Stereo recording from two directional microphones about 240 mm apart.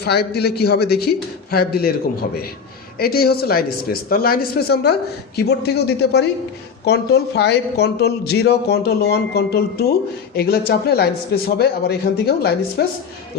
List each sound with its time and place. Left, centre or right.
0.0 s a man's voice: left
3.0 s a man's voice: left